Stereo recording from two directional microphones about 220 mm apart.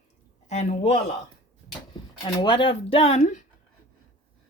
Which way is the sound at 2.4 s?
20° left (ahead or behind).